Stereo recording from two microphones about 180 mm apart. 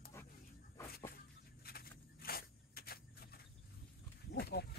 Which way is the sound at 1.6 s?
55° left (ahead or behind).